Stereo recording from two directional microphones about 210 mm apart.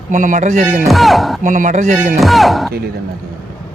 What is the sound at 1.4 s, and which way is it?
Speech, 35° right (ahead or behind).